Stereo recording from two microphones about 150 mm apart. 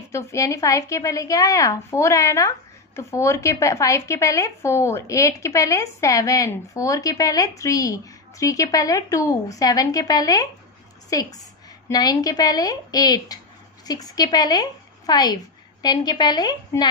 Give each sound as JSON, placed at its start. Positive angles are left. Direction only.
{"t": 0.1, "sound": "a woman's voice", "side_deg": 20}